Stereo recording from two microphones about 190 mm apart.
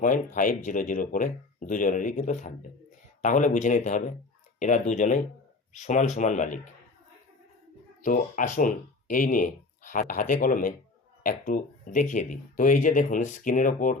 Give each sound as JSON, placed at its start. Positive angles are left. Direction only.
{"t": 0.3, "sound": "speech", "side_deg": 45}
{"t": 8.0, "sound": "speech", "side_deg": 45}